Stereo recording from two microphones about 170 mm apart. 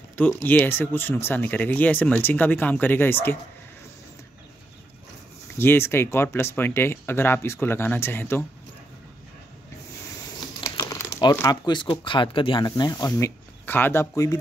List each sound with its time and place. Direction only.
0.1 s speech: 10° left (ahead or behind)
5.6 s speech: 15° left (ahead or behind)
10.6 s speech: 20° left (ahead or behind)